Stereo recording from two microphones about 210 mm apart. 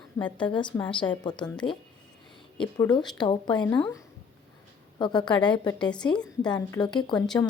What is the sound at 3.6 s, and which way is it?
Speech, 10° left (ahead or behind).